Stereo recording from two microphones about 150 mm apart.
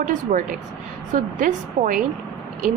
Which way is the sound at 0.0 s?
55° right (ahead or behind).